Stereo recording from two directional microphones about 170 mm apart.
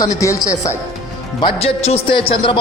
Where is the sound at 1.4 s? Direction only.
35° left (ahead or behind).